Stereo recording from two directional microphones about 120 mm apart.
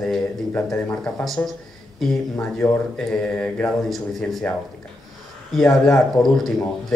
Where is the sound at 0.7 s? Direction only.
10° left (ahead or behind).